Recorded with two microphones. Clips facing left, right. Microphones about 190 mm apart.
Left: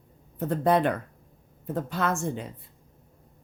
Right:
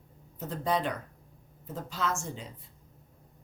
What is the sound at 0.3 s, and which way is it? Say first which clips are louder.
A woman's voice: left 7 dB; 55° left (ahead or behind).